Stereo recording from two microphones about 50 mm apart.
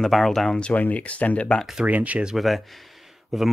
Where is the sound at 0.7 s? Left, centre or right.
Left.